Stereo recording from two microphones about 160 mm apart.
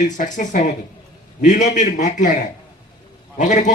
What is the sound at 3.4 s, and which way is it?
Speech, 50° left (ahead or behind).